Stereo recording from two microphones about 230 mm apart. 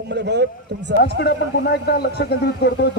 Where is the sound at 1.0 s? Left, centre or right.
Left.